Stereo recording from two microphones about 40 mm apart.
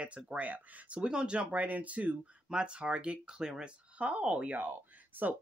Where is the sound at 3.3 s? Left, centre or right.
Centre.